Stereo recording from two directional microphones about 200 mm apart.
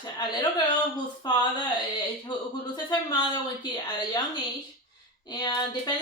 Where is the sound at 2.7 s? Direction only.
20° left (ahead or behind).